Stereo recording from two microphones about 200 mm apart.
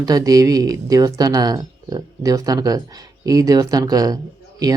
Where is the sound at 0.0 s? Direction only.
20° right (ahead or behind).